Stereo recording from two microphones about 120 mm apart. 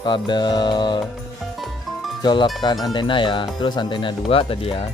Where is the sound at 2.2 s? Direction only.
40° left (ahead or behind).